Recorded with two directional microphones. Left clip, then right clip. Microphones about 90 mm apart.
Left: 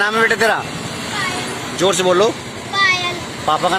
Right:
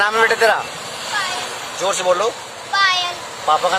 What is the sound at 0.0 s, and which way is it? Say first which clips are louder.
Speech: even; 5° left (ahead or behind).